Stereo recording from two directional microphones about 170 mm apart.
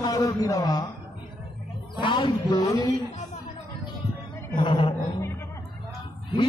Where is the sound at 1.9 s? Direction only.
25° left (ahead or behind).